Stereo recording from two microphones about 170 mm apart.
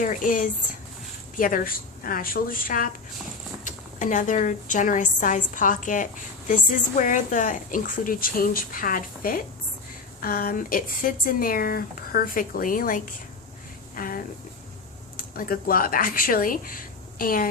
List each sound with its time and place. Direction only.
0.0 s a woman's voice: 50° left (ahead or behind)